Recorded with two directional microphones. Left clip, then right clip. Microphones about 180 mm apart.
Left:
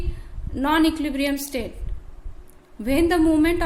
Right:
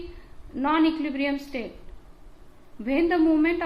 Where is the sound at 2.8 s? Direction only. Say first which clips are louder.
Left 3 dB; 50° left (ahead or behind).